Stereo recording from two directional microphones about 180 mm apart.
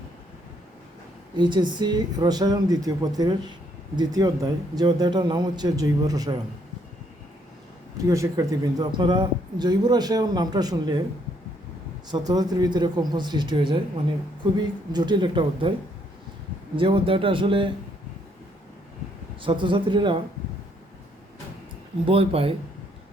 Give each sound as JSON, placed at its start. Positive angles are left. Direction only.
{"t": 1.4, "sound": "speech", "side_deg": -25}
{"t": 8.0, "sound": "speech", "side_deg": -15}
{"t": 12.1, "sound": "speech", "side_deg": -20}
{"t": 14.9, "sound": "speech", "side_deg": -25}
{"t": 16.7, "sound": "speech", "side_deg": -30}
{"t": 19.4, "sound": "speech", "side_deg": -25}
{"t": 22.0, "sound": "speech", "side_deg": -30}